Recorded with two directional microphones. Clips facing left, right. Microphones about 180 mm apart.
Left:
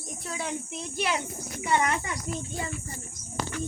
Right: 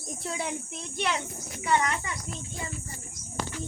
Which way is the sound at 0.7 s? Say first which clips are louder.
Left 1 dB; 5° left (ahead or behind).